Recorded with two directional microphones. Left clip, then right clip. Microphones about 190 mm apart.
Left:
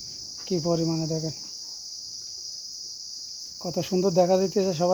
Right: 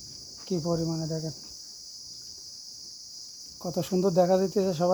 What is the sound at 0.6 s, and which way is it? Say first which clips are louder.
Cricket: left 5 dB; 15° left (ahead or behind).